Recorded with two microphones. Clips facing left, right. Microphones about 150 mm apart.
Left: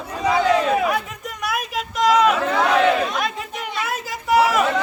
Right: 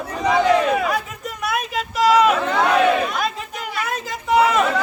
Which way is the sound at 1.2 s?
Centre (ahead or behind).